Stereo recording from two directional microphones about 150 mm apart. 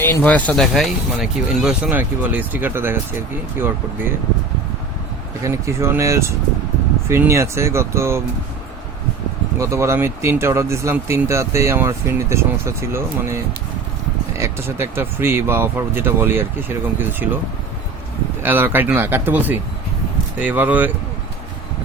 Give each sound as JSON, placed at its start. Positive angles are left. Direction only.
{"t": 0.0, "sound": "speech", "side_deg": 15}
{"t": 5.4, "sound": "speech", "side_deg": -20}
{"t": 9.6, "sound": "speech", "side_deg": -20}
{"t": 18.4, "sound": "speech", "side_deg": -15}